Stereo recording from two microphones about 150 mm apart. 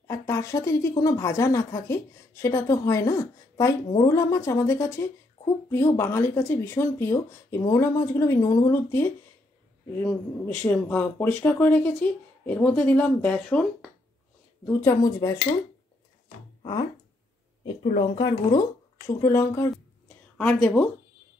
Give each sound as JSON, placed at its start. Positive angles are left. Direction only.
{"t": 0.0, "sound": "speech", "side_deg": 20}
{"t": 14.7, "sound": "speech", "side_deg": 15}
{"t": 18.1, "sound": "speech", "side_deg": 30}
{"t": 20.5, "sound": "speech", "side_deg": 5}